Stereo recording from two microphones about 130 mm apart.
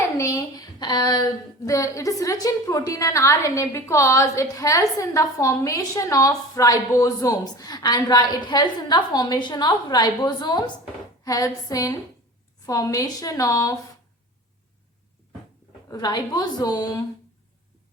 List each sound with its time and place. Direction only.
0.2 s a woman's voice: 25° left (ahead or behind)
15.9 s a woman's voice: 30° left (ahead or behind)